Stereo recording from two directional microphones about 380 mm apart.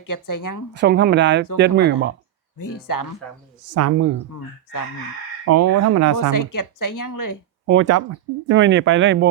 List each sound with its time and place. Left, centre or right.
0.0 s a woman's voice: left
0.8 s speech: right
2.7 s a woman's voice: left
3.8 s speech: right
5.5 s speech: right
6.3 s a woman's voice: left
7.7 s speech: right